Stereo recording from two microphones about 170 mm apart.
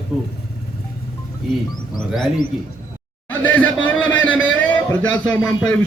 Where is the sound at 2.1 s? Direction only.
Centre (ahead or behind).